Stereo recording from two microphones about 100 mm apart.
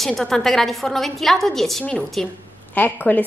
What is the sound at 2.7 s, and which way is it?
Speech, 20° left (ahead or behind).